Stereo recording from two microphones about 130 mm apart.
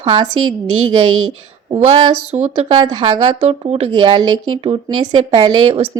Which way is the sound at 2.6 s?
40° right (ahead or behind).